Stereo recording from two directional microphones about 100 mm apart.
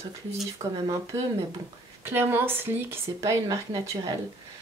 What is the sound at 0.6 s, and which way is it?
Speech, 90° right.